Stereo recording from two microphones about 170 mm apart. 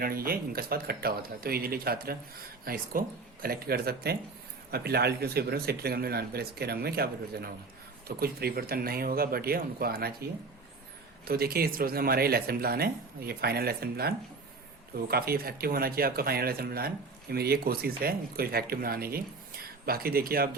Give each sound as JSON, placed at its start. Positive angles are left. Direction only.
{"t": 0.0, "sound": "speech", "side_deg": -60}
{"t": 11.3, "sound": "speech", "side_deg": -65}